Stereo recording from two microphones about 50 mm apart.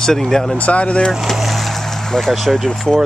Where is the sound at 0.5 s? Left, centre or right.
Left.